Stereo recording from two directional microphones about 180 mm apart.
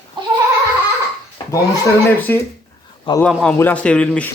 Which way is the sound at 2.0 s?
10° left (ahead or behind).